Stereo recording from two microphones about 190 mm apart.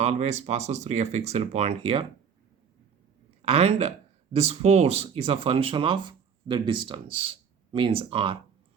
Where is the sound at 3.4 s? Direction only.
35° right (ahead or behind).